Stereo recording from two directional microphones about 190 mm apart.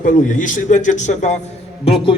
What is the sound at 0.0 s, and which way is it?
A man's voice, 45° left (ahead or behind).